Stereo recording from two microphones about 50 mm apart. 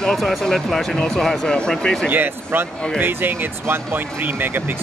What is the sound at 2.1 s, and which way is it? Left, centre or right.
Speech, right.